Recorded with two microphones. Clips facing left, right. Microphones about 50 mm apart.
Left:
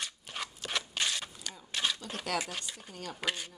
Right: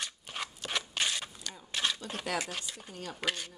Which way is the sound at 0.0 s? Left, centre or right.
Centre.